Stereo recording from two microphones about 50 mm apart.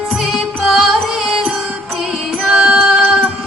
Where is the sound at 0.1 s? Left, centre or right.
Centre.